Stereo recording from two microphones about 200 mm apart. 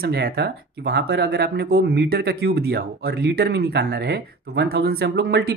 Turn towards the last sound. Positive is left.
turn(degrees=-55)  # may be behind; listen again after turning